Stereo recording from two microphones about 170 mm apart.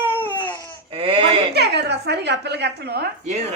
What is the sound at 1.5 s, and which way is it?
A woman's voice, 75° right (ahead or behind).